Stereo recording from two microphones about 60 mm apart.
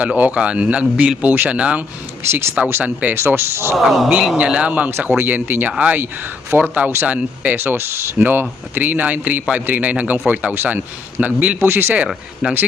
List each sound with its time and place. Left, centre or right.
0.0 s a man's voice: right
2.8 s a man's voice: right
3.2 s speech: right
3.8 s speech: centre
4.4 s a man's voice: centre
4.9 s a man's voice: right
12.0 s speech: centre